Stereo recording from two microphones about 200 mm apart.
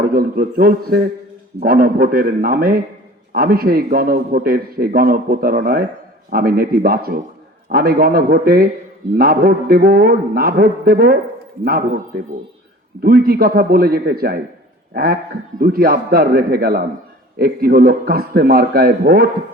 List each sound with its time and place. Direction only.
0.0 s a man's voice: 50° right (ahead or behind)